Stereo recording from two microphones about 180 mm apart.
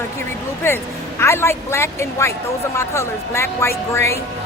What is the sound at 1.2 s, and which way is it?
Speech, 15° left (ahead or behind).